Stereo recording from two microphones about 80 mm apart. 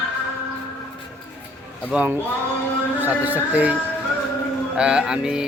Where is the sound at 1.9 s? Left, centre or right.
Centre.